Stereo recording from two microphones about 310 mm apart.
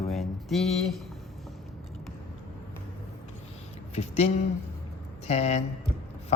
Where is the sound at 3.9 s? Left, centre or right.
Centre.